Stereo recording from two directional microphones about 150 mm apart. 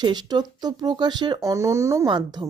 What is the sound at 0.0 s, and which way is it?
A woman's voice, 30° right (ahead or behind).